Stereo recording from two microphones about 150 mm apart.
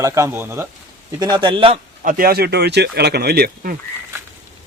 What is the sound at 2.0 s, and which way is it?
Speech, 65° right (ahead or behind).